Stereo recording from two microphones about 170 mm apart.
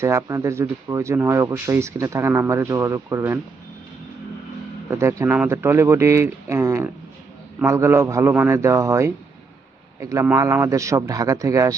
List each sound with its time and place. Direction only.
0.0 s speech: 15° right (ahead or behind)
4.9 s speech: 15° right (ahead or behind)